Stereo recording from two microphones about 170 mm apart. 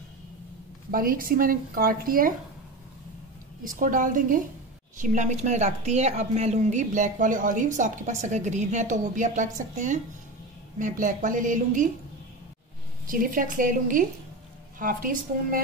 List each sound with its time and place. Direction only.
0.9 s speech: 55° right (ahead or behind)
3.6 s a woman's voice: 50° right (ahead or behind)
13.0 s a woman's voice: 55° right (ahead or behind)